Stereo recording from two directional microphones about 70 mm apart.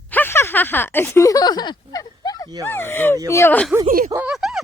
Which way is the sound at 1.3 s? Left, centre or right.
Left.